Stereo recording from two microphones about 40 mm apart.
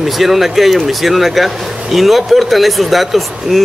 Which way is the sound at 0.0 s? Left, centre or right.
Centre.